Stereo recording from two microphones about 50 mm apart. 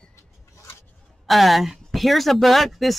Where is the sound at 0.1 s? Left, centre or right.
Left.